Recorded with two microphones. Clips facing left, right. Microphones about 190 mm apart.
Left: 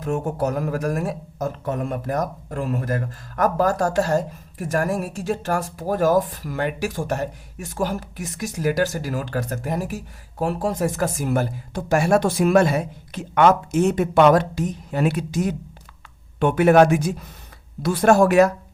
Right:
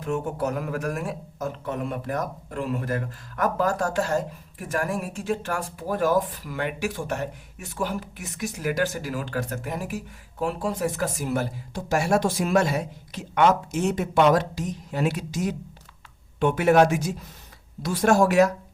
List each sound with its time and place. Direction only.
0.0 s speech: 40° left (ahead or behind); by 18.5 s 60° left (ahead or behind)